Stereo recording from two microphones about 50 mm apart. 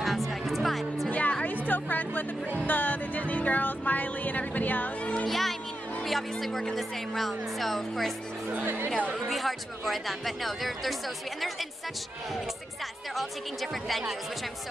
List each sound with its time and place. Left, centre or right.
0.0 s music: centre
1.1 s music: left
5.3 s speech: centre
8.6 s speech: right
9.3 s speech: centre
13.1 s speech: centre